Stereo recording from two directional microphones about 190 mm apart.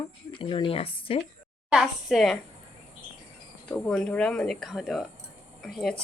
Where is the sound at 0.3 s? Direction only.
25° left (ahead or behind).